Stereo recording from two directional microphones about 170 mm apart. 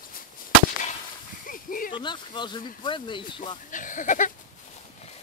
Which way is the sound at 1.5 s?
55° left (ahead or behind).